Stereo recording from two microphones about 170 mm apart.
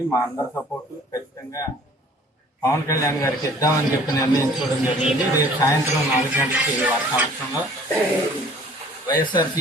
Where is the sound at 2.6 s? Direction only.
20° left (ahead or behind).